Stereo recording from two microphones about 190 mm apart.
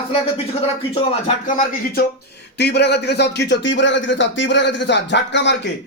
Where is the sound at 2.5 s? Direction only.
60° left (ahead or behind).